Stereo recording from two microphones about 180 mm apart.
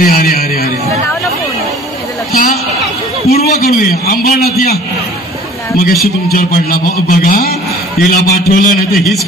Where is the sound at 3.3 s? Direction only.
60° left (ahead or behind).